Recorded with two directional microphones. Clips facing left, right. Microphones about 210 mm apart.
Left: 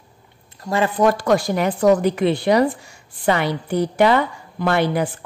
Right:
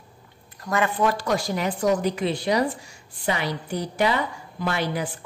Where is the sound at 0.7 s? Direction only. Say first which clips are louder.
Left 3 dB; 25° left (ahead or behind).